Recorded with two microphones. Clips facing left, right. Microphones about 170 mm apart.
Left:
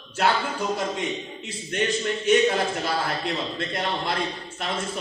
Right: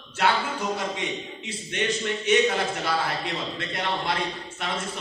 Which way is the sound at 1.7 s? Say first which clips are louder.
Left 2 dB; 45° left (ahead or behind).